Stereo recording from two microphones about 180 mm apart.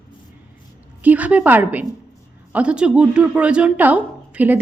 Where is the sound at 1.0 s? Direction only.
10° right (ahead or behind).